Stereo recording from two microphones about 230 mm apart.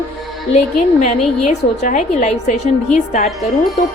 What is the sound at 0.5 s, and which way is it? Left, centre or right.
A woman's voice, left.